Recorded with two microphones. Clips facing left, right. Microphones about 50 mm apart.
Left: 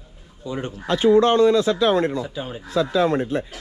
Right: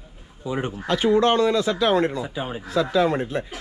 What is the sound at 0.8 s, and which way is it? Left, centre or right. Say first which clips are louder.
Speech: left 3 dB; right.